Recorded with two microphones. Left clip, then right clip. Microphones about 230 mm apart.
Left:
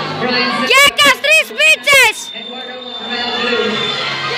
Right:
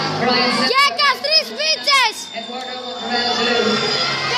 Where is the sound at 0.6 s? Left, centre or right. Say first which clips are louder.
Left 9 dB; centre.